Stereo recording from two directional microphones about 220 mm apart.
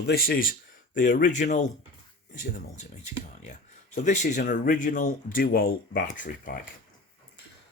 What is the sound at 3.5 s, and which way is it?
Speech, 35° left (ahead or behind).